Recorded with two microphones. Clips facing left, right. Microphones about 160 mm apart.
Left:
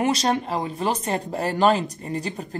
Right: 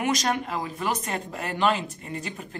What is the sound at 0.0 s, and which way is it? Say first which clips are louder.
Speech: left 4 dB; 30° left (ahead or behind).